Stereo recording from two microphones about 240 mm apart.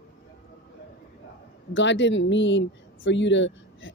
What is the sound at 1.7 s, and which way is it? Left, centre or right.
Speech, left.